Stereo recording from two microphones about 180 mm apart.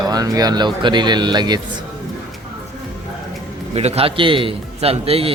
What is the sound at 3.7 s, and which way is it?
A man's voice, 35° right (ahead or behind).